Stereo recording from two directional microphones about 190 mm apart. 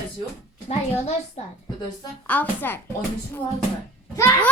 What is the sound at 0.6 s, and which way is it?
Speech, 35° left (ahead or behind).